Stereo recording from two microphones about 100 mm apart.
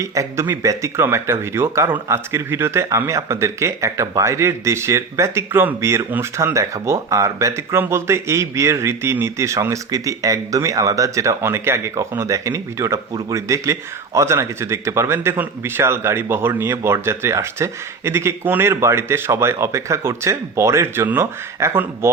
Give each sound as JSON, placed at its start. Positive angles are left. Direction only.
{"t": 0.0, "sound": "a man's voice", "side_deg": -30}